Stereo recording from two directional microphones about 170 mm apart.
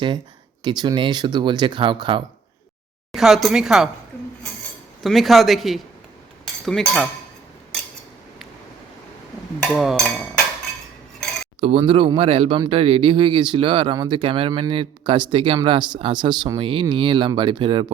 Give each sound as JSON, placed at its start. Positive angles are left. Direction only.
{"t": 0.6, "sound": "speech", "side_deg": -25}
{"t": 3.1, "sound": "speech", "side_deg": 0}
{"t": 5.0, "sound": "speech", "side_deg": 0}
{"t": 9.7, "sound": "speech", "side_deg": 0}
{"t": 11.6, "sound": "speech", "side_deg": -35}